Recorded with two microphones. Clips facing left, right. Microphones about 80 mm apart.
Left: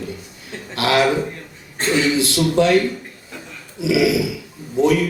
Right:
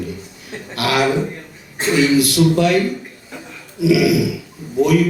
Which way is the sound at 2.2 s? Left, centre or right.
Left.